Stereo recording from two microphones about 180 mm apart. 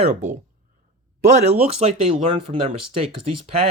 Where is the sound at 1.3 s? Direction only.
35° right (ahead or behind).